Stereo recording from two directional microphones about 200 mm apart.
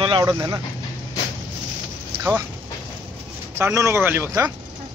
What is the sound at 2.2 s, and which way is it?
Speech, 10° right (ahead or behind).